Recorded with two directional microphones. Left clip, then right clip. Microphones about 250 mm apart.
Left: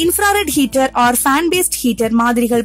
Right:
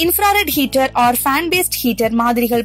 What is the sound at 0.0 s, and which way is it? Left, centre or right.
A woman's voice, centre.